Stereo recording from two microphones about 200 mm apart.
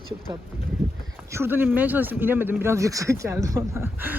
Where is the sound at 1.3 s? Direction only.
10° right (ahead or behind).